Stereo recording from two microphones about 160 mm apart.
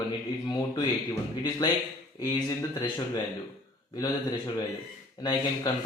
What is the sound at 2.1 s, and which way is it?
Speech, 25° left (ahead or behind).